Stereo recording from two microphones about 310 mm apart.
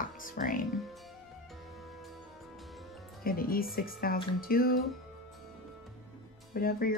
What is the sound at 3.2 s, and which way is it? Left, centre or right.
Speech, left.